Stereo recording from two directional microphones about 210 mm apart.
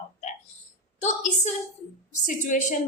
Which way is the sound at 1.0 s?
35° left (ahead or behind).